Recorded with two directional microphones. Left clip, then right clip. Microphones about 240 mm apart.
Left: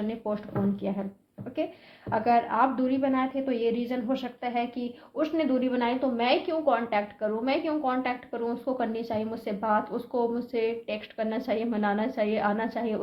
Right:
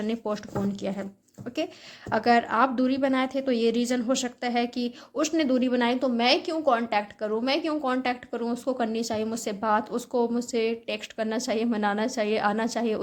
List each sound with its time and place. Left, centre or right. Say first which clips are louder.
0.2 s a woman's voice: even; right